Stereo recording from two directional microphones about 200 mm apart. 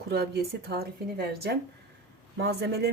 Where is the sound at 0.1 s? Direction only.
50° right (ahead or behind).